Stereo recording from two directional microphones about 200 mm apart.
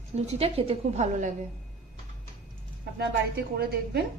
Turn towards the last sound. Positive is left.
turn(degrees=-50)  # may be behind; listen again after turning